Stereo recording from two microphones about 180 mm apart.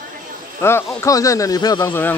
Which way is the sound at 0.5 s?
15° left (ahead or behind).